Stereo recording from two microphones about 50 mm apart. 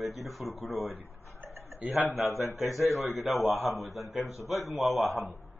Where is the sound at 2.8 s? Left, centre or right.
Left.